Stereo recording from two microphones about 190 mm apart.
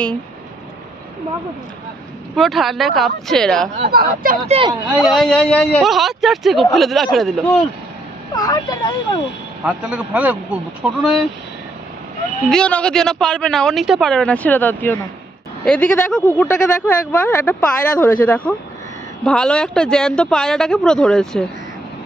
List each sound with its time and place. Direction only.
2.3 s a man's voice: centre (ahead or behind)
3.9 s speech: 50° right (ahead or behind)
4.5 s speech: 25° right (ahead or behind)
4.9 s a man's voice: centre (ahead or behind)
8.4 s speech: 20° left (ahead or behind)
9.7 s speech: 10° right (ahead or behind)
12.4 s a man's voice: 5° left (ahead or behind)